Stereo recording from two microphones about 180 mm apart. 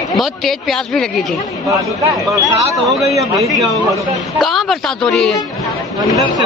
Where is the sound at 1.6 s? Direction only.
15° right (ahead or behind).